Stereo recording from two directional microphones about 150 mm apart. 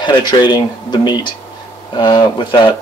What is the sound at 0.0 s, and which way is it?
Speech, 30° left (ahead or behind).